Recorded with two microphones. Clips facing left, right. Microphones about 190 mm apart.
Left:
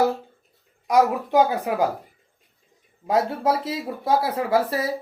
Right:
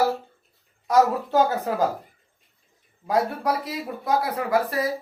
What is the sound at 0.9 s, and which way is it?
Speech, 15° left (ahead or behind).